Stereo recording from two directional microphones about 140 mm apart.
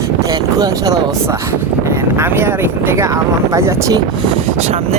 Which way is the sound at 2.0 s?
15° right (ahead or behind).